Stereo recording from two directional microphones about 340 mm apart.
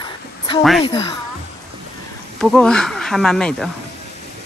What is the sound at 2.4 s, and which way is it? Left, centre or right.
Speech, centre.